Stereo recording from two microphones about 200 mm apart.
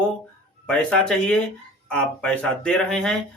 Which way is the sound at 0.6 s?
5° left (ahead or behind).